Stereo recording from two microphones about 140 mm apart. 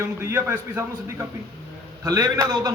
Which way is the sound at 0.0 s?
20° right (ahead or behind).